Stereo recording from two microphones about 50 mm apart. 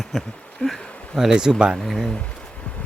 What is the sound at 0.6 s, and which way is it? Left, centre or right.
Speech, left.